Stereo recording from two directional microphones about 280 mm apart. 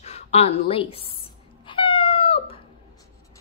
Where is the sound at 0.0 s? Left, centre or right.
Left.